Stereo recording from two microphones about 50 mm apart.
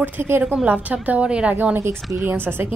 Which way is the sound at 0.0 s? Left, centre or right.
Right.